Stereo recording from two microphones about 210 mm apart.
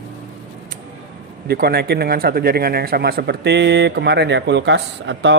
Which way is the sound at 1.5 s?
50° right (ahead or behind).